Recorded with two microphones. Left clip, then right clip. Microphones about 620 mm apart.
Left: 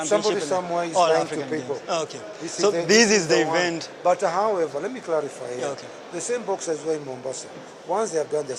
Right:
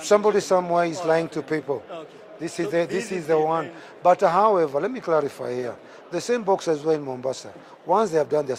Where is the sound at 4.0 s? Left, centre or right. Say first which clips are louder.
Right 4 dB; right.